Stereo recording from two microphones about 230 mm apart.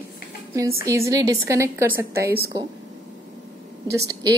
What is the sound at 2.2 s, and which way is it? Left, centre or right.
Speech, right.